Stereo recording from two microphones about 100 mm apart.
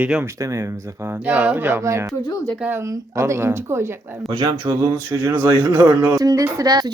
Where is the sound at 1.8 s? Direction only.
30° right (ahead or behind).